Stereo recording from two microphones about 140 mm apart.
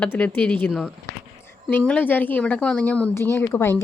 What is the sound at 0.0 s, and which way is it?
Speech, 10° left (ahead or behind).